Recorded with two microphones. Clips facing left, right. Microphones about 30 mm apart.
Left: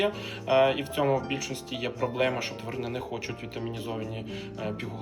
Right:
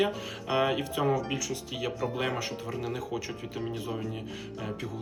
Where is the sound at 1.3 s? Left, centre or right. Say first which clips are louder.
Left 1 dB; left.